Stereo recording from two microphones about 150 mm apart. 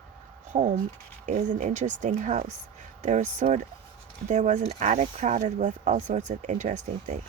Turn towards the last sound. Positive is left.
turn(degrees=-50)  # may be behind; listen again after turning